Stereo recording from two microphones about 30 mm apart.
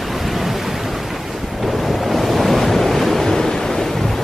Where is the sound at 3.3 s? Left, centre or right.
Centre.